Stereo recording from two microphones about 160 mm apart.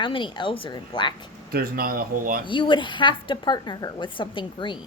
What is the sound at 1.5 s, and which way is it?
Speech, 65° right (ahead or behind).